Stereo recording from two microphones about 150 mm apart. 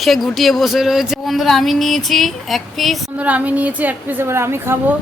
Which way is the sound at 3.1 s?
10° right (ahead or behind).